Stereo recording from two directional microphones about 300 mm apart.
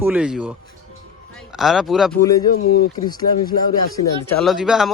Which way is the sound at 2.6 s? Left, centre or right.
Left.